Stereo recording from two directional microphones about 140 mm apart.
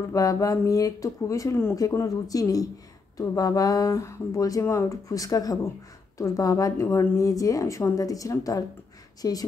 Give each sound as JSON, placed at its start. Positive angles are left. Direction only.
{"t": 0.1, "sound": "speech", "side_deg": 25}